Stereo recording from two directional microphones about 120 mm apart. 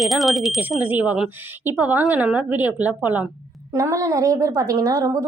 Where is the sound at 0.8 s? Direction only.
15° right (ahead or behind).